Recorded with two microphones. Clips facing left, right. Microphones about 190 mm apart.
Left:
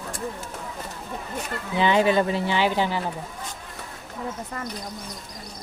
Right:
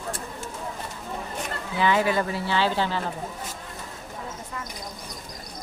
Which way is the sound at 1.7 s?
20° left (ahead or behind).